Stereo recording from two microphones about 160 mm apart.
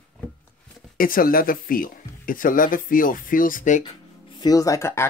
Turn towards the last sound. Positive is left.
turn(degrees=15)  # may be behind; listen again after turning